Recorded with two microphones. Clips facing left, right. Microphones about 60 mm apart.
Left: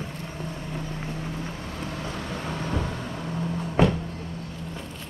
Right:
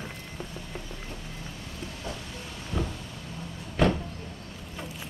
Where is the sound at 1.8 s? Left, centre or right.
Left.